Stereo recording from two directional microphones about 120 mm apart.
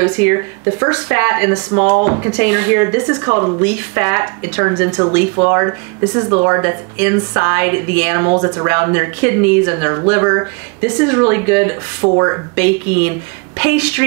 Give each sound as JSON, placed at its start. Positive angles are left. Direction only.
{"t": 0.0, "sound": "speech", "side_deg": -20}